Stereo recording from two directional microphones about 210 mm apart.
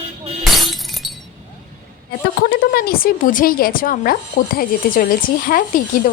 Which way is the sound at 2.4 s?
45° left (ahead or behind).